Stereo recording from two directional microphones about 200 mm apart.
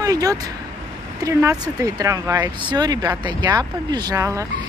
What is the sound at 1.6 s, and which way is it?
Speech, 15° right (ahead or behind).